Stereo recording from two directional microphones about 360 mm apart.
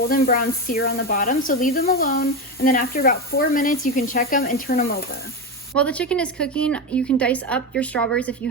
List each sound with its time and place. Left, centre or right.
0.1 s speech: left
5.7 s a woman's voice: centre